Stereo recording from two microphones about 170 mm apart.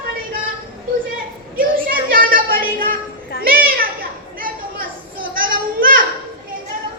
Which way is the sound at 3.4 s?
60° right (ahead or behind).